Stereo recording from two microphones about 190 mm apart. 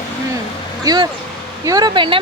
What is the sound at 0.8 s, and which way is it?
Speech, 20° right (ahead or behind).